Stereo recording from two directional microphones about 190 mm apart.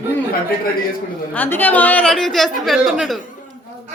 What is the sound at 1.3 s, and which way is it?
Speech, 10° left (ahead or behind).